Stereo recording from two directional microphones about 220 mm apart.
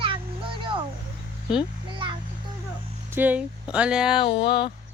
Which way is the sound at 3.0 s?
10° right (ahead or behind).